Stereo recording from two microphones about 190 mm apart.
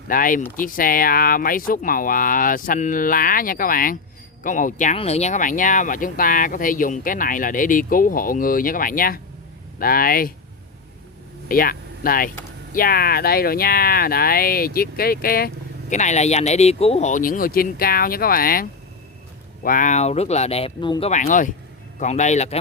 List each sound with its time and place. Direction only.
0.1 s speech: 45° left (ahead or behind)
11.4 s speech: 50° left (ahead or behind); by 21.1 s 25° left (ahead or behind)
21.1 s speech: 40° left (ahead or behind)